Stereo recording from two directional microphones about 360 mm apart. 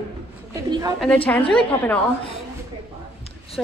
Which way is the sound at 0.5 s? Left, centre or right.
Centre.